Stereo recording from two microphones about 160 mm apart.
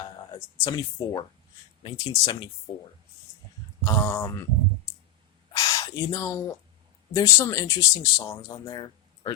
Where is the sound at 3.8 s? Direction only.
15° left (ahead or behind).